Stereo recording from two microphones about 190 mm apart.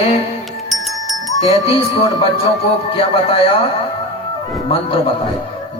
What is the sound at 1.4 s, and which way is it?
A man's voice, 30° left (ahead or behind).